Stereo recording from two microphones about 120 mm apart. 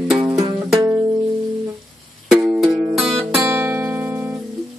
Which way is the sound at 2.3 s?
5° right (ahead or behind).